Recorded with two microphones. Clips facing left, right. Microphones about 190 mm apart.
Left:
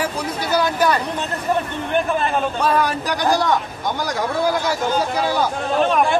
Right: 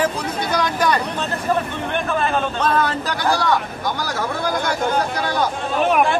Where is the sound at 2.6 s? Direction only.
10° left (ahead or behind).